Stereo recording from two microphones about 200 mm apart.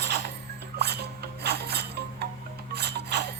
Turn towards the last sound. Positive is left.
turn(degrees=-55)  # may be behind; listen again after turning